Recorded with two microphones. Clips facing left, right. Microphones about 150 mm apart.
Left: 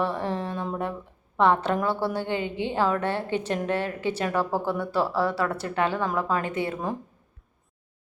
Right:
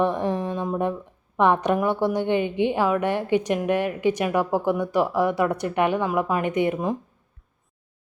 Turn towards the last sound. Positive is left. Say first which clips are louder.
# right 6 dB
turn(degrees=-15)  # may be behind; listen again after turning